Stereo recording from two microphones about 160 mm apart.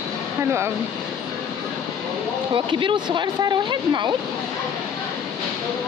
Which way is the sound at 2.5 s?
30° right (ahead or behind).